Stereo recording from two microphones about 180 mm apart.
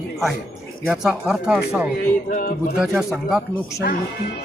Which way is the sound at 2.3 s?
50° left (ahead or behind).